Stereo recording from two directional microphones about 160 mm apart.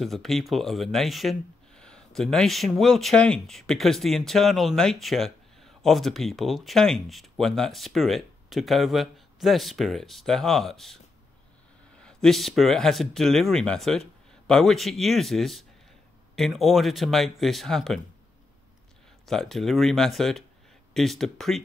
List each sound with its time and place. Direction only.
0.0 s speech: centre (ahead or behind)
12.0 s speech: 5° left (ahead or behind)
19.2 s speech: centre (ahead or behind)